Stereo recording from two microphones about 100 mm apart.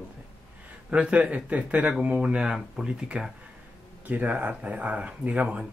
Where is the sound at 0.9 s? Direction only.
15° right (ahead or behind).